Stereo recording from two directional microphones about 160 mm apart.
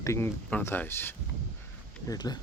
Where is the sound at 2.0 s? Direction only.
25° left (ahead or behind).